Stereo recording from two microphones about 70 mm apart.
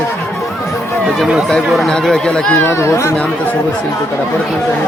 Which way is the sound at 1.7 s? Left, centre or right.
Centre.